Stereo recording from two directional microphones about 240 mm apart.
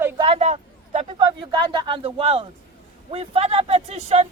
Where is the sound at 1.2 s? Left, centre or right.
Centre.